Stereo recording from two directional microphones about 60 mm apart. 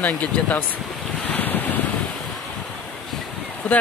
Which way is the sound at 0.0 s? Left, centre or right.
Left.